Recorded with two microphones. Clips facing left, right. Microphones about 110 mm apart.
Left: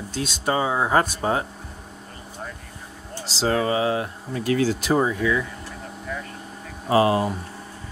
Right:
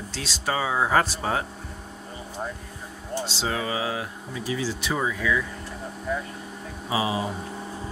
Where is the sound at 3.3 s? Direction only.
40° left (ahead or behind).